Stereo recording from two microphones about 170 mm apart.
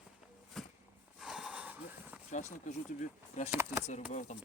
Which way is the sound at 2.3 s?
45° left (ahead or behind).